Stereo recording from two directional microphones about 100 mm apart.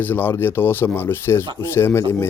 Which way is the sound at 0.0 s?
20° left (ahead or behind).